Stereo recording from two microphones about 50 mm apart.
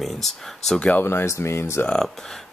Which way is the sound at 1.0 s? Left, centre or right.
Left.